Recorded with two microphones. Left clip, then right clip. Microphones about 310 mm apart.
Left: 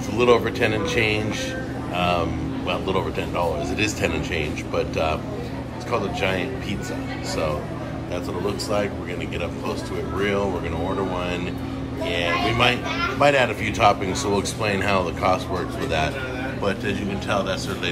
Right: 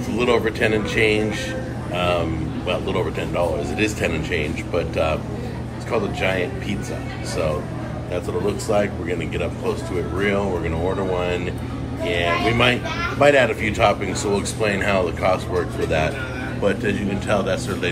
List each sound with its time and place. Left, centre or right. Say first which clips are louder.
0.2 s speech: left 1 dB; centre
8.5 s speech: right 3 dB; centre
11.1 s speech: right 3 dB; centre
16.6 s speech: right 5 dB; centre